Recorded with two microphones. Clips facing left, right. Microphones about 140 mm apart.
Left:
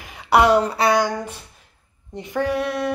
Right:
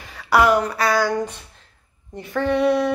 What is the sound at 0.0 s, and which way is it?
Speech, 20° left (ahead or behind).